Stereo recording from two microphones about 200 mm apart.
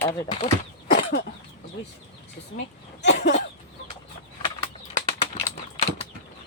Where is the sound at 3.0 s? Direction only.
35° left (ahead or behind).